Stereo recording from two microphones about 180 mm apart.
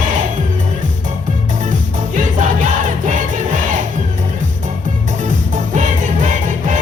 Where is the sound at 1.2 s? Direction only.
45° right (ahead or behind).